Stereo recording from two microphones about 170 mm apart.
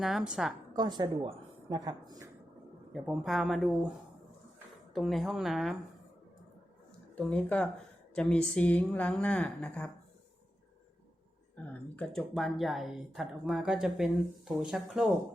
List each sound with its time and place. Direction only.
0.0 s speech: centre (ahead or behind)
0.7 s a woman's voice: 25° right (ahead or behind)
2.9 s speech: 5° right (ahead or behind)
4.9 s speech: centre (ahead or behind)
7.2 s a woman's voice: 5° left (ahead or behind)
11.5 s a woman's voice: 10° left (ahead or behind)